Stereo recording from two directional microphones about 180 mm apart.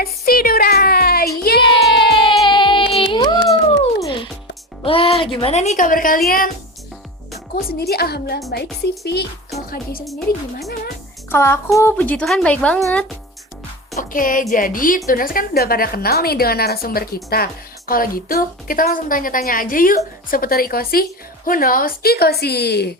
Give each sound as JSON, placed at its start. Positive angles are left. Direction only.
{"t": 0.0, "sound": "a sound", "side_deg": 55}
{"t": 2.0, "sound": "a sound", "side_deg": 25}
{"t": 2.5, "sound": "music", "side_deg": 25}
{"t": 4.8, "sound": "a woman's voice", "side_deg": 30}
{"t": 7.5, "sound": "a woman's voice", "side_deg": 60}
{"t": 10.0, "sound": "speech", "side_deg": 0}
{"t": 11.3, "sound": "a woman's voice", "side_deg": 15}
{"t": 13.9, "sound": "a woman's voice", "side_deg": 50}